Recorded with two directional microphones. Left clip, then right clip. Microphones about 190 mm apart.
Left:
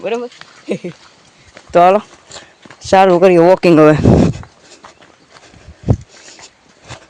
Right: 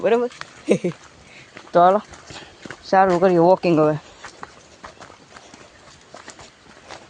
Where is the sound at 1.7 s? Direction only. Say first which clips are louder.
Left 6 dB; 25° left (ahead or behind).